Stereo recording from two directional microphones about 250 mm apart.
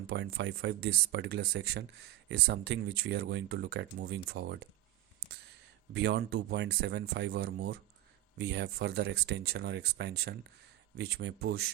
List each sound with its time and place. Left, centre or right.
0.1 s speech: right
5.9 s speech: right